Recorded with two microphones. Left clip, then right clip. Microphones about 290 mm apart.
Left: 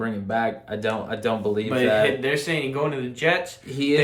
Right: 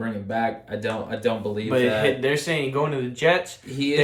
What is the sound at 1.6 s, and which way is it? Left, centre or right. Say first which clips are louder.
Speech: even; centre.